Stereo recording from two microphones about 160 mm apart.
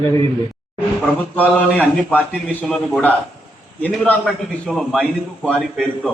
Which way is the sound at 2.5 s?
5° left (ahead or behind).